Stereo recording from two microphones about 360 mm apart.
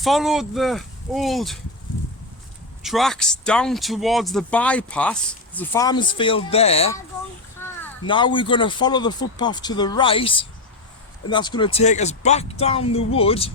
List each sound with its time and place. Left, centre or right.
0.0 s speech: centre
2.8 s speech: centre